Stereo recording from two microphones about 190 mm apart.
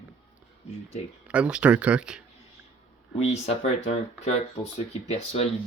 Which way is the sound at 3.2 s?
35° left (ahead or behind).